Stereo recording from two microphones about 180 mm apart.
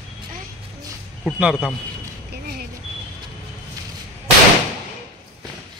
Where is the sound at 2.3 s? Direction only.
60° right (ahead or behind).